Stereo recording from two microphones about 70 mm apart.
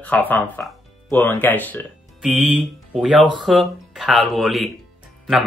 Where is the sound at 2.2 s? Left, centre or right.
Centre.